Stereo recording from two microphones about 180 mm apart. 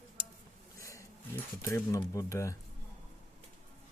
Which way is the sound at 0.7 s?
15° left (ahead or behind).